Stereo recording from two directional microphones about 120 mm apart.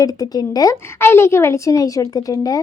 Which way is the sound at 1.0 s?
20° left (ahead or behind).